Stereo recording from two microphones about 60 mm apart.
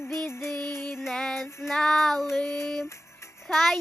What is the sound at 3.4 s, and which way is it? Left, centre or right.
Child singing, centre.